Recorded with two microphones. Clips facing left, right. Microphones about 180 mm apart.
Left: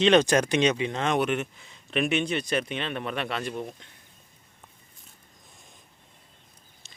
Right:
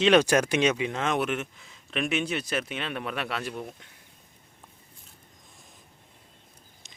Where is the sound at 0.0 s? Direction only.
10° right (ahead or behind).